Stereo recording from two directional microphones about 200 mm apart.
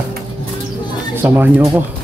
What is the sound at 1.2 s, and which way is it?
Speech, 10° right (ahead or behind).